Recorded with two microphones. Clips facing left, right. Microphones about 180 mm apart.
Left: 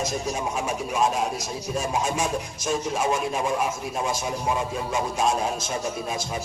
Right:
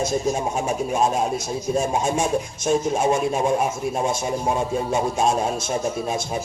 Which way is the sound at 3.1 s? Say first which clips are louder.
Right 6 dB; 45° right (ahead or behind).